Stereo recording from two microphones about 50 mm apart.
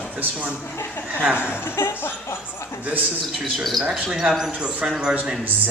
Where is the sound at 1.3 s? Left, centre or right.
Left.